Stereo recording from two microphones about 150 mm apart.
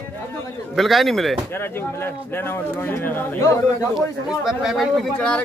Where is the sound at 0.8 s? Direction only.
Centre (ahead or behind).